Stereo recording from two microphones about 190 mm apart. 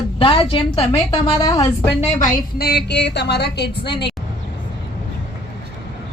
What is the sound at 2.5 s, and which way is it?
A woman's voice, 55° left (ahead or behind).